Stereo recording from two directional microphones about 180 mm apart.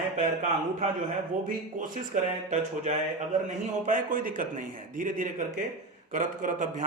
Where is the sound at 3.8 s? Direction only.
45° right (ahead or behind).